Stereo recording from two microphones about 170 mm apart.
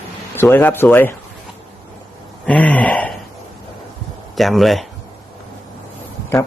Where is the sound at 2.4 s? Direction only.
5° left (ahead or behind).